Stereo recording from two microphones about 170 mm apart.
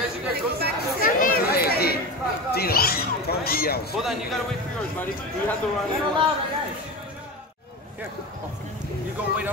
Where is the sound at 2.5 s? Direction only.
65° left (ahead or behind).